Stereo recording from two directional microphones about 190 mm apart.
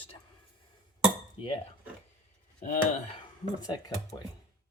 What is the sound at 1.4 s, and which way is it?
Speech, 25° left (ahead or behind).